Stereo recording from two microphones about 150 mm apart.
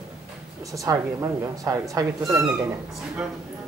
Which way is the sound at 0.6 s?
20° right (ahead or behind).